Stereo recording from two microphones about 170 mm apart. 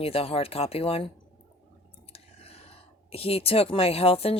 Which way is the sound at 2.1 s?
35° left (ahead or behind).